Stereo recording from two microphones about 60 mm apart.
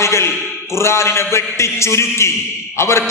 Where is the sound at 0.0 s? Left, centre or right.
Left.